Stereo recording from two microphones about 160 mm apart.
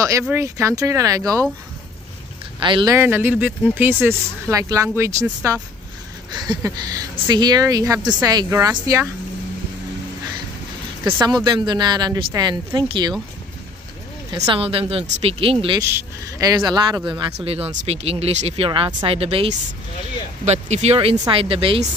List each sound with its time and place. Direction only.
0.2 s a woman's voice: 15° right (ahead or behind)
2.6 s a woman's voice: 25° right (ahead or behind)
11.1 s a woman's voice: 25° right (ahead or behind)
14.3 s a woman's voice: 20° right (ahead or behind)
14.6 s speech: 35° right (ahead or behind)
15.8 s a woman's voice: 20° right (ahead or behind)
17.5 s speech: 40° right (ahead or behind)